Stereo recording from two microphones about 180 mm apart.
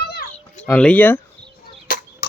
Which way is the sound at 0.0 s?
60° left (ahead or behind).